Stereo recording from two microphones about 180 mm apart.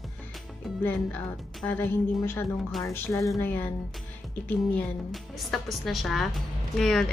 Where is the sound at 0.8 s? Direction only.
10° left (ahead or behind).